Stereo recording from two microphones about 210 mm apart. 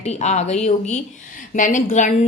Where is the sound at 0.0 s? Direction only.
30° left (ahead or behind).